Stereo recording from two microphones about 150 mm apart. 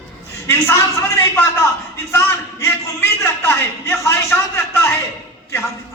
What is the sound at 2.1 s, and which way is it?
A man's voice, 15° left (ahead or behind).